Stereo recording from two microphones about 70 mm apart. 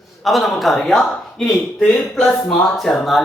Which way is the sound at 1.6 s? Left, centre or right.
Centre.